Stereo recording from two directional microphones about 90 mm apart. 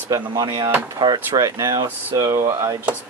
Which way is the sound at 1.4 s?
45° right (ahead or behind).